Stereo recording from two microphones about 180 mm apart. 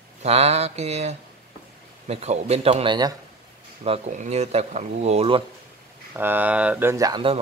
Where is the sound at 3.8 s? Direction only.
40° right (ahead or behind).